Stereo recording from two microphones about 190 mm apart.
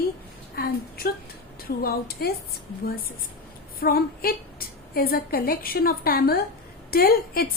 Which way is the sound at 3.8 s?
50° left (ahead or behind).